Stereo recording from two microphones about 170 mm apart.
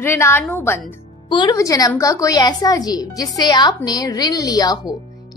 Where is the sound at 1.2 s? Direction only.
25° left (ahead or behind).